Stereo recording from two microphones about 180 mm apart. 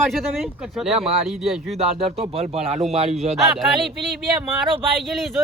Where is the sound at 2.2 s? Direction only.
35° right (ahead or behind).